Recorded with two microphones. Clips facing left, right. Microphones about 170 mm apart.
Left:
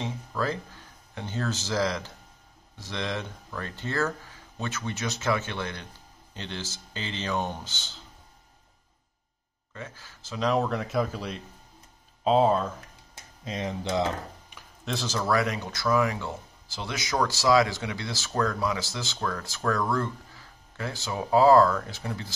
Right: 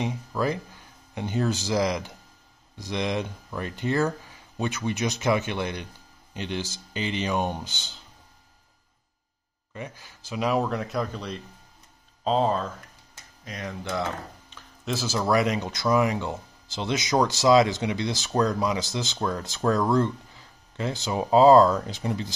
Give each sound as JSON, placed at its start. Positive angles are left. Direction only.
{"t": 0.0, "sound": "speech", "side_deg": -15}
{"t": 9.8, "sound": "speech", "side_deg": -15}
{"t": 13.5, "sound": "speech", "side_deg": 20}
{"t": 14.9, "sound": "speech", "side_deg": -5}
{"t": 15.1, "sound": "speech", "side_deg": -20}